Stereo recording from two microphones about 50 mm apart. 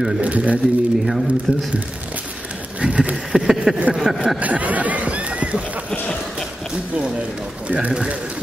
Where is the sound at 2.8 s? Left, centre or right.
Right.